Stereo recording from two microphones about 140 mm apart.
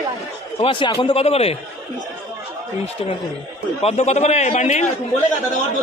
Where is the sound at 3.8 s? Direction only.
55° left (ahead or behind).